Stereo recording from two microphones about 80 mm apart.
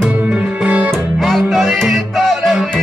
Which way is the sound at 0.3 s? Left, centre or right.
Centre.